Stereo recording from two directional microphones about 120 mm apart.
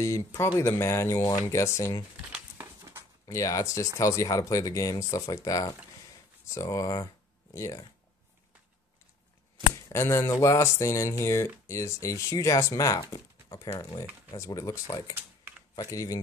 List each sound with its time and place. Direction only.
0.0 s speech: 25° left (ahead or behind)
2.5 s a sound: 20° right (ahead or behind)
3.3 s speech: 25° left (ahead or behind)
9.8 s speech: 20° left (ahead or behind)